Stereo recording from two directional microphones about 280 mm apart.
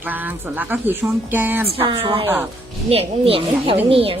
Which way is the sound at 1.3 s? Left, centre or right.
Centre.